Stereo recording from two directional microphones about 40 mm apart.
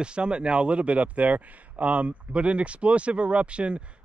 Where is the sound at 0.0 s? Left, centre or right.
Right.